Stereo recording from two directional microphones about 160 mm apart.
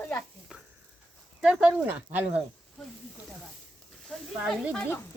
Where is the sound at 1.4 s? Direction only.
5° right (ahead or behind).